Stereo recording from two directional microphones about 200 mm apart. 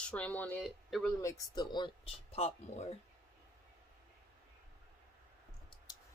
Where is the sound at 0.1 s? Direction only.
5° left (ahead or behind).